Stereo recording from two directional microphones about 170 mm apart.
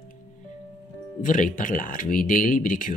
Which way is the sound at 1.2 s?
50° left (ahead or behind).